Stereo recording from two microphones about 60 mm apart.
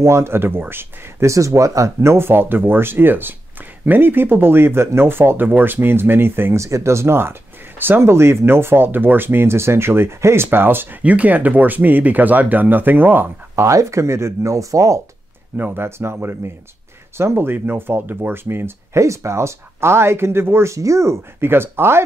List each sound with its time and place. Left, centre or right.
0.0 s speech: right
1.2 s speech: right
6.6 s speech: right
11.0 s speech: right
13.6 s speech: right
15.5 s speech: right
18.9 s speech: right
20.7 s speech: right
21.4 s speech: right